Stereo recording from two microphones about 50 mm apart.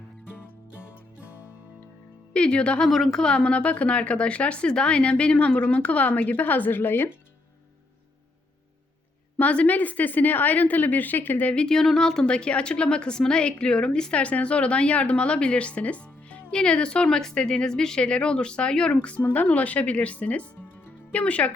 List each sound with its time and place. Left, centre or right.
2.3 s a woman's voice: left
2.9 s a woman's voice: centre
3.3 s a woman's voice: left
9.4 s a woman's voice: left
11.5 s a woman's voice: centre
16.5 s a woman's voice: centre
19.2 s a woman's voice: left